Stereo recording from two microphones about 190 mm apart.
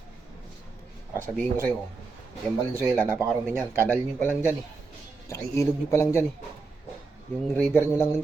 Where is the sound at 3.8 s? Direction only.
10° left (ahead or behind).